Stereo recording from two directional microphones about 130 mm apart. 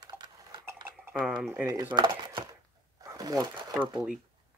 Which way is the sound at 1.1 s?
5° right (ahead or behind).